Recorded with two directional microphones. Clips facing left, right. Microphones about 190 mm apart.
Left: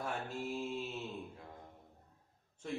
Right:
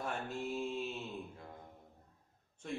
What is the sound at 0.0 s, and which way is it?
Speech, 5° left (ahead or behind).